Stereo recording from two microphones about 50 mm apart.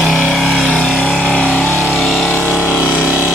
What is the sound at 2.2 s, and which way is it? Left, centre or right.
Vehicle, left.